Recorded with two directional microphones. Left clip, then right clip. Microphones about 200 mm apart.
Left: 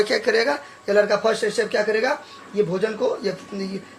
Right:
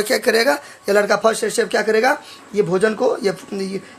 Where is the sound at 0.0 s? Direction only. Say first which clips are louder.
Right 3 dB; 40° right (ahead or behind).